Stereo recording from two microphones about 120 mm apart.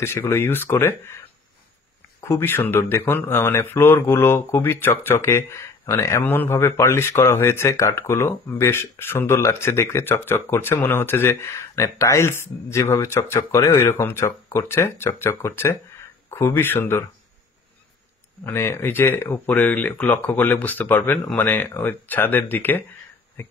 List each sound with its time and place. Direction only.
0.0 s speech: 20° left (ahead or behind)
2.2 s speech: 20° left (ahead or behind)
18.4 s speech: 20° left (ahead or behind)